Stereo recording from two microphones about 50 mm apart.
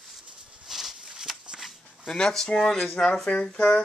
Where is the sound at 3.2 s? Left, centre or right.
Left.